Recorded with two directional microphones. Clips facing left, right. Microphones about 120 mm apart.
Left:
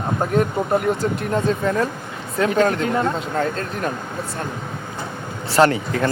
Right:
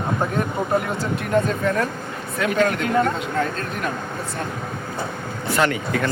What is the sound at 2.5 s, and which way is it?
Speech, 30° left (ahead or behind).